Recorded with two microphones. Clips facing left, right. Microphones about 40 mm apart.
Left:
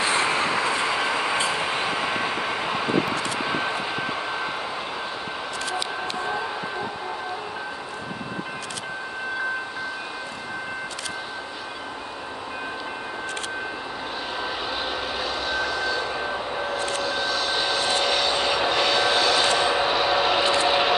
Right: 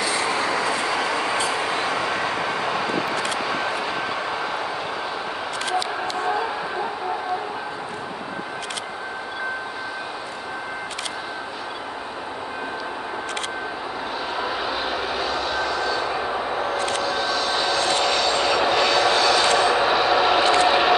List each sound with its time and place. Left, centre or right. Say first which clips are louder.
0.0 s train: left 1 dB; left; by 1.4 s centre
1.7 s vehicle: right 2 dB; centre
14.4 s vehicle: right 3 dB; centre
16.7 s vehicle: right 3 dB; right
17.0 s train: right 2 dB; centre
20.6 s a sound: right 3 dB; centre